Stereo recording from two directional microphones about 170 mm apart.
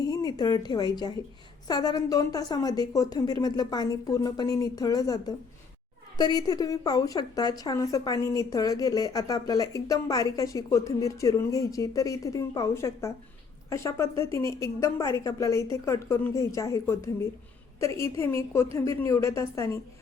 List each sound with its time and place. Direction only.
0.0 s a woman's voice: 20° left (ahead or behind)